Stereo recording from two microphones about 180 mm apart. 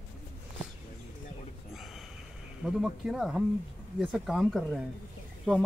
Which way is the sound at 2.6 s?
5° right (ahead or behind).